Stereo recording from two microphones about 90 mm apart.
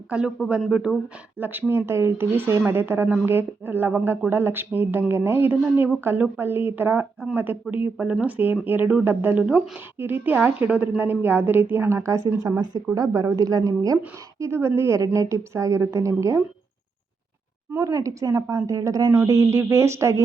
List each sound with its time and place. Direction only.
0.1 s speech: 10° right (ahead or behind)
1.4 s a woman's voice: 20° right (ahead or behind)
9.4 s a woman's voice: 10° right (ahead or behind); by 16.4 s 35° right (ahead or behind)
17.7 s a woman's voice: 30° right (ahead or behind)